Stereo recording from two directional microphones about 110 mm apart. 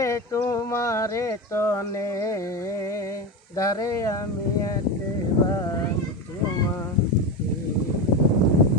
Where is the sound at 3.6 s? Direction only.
30° left (ahead or behind).